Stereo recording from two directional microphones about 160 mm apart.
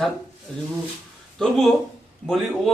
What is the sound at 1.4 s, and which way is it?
Speech, centre (ahead or behind).